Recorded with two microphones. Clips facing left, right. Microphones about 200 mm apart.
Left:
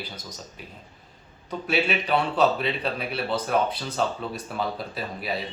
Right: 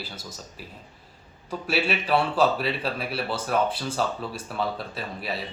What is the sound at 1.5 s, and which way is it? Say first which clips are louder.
Speech: left 1 dB; 5° right (ahead or behind).